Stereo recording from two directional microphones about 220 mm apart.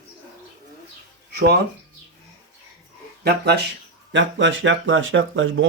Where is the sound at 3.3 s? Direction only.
50° right (ahead or behind).